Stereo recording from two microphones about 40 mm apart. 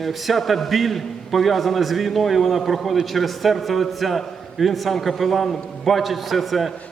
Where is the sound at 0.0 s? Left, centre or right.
Centre.